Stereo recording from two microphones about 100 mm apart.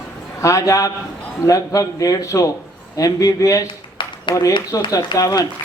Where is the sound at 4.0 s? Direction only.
55° left (ahead or behind).